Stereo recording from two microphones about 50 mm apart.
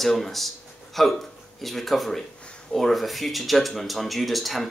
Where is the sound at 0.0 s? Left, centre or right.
Centre.